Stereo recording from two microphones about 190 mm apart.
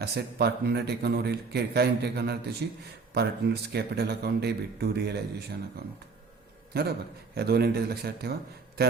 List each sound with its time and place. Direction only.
0.0 s a man's voice: 60° right (ahead or behind)